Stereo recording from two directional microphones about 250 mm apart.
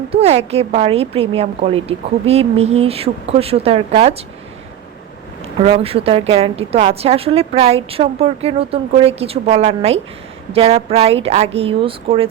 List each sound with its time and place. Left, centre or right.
0.1 s a woman's voice: right
5.6 s a woman's voice: right